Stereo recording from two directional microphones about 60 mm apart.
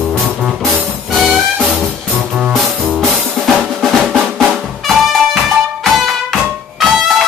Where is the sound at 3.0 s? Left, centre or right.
Centre.